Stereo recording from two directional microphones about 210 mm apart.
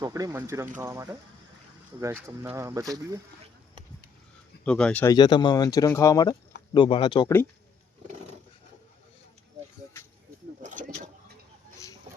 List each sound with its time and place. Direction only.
0.0 s speech: 15° right (ahead or behind)
4.6 s speech: 5° left (ahead or behind)
5.1 s speech: 20° left (ahead or behind)
10.6 s vehicle: 40° right (ahead or behind)